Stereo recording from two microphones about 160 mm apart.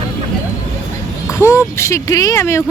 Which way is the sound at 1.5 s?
15° left (ahead or behind).